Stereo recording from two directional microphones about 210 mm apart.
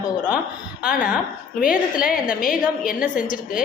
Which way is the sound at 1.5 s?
40° left (ahead or behind).